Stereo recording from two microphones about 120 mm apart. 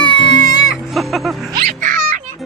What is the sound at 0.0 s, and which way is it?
Music, 40° left (ahead or behind).